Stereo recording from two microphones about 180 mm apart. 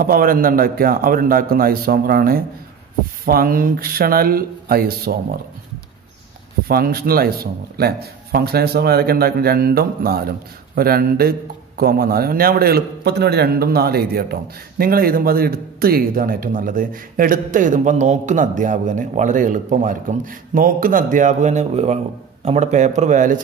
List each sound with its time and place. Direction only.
0.0 s a man's voice: 50° right (ahead or behind)
6.7 s speech: 55° right (ahead or behind)